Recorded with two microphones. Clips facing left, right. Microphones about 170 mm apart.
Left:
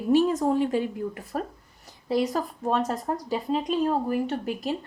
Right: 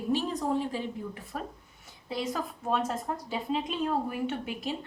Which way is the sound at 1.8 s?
40° left (ahead or behind).